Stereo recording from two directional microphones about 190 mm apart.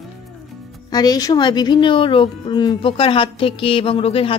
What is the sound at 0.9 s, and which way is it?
Speech, 20° left (ahead or behind).